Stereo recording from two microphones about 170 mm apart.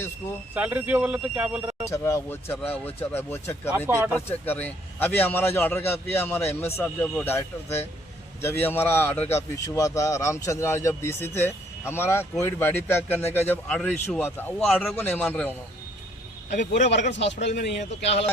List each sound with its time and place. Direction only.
0.5 s speech: 10° right (ahead or behind)
1.9 s speech: 15° left (ahead or behind)
3.7 s speech: 10° right (ahead or behind)
4.1 s speech: 15° left (ahead or behind)
14.6 s a man's voice: centre (ahead or behind)
14.9 s speech: 10° left (ahead or behind)
16.9 s speech: 90° left
18.0 s speech: 40° left (ahead or behind)